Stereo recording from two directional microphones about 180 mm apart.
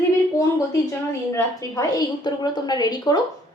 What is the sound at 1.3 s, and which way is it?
A woman's voice, 20° left (ahead or behind).